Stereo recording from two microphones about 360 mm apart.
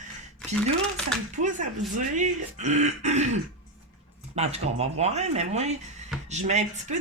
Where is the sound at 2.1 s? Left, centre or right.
Centre.